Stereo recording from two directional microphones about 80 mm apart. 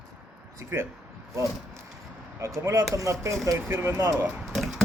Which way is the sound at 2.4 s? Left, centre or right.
Right.